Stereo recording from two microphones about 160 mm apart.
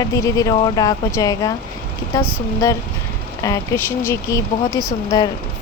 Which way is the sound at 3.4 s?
20° left (ahead or behind).